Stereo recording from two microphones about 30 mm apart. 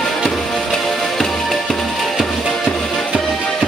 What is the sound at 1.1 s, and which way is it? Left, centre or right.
Music, centre.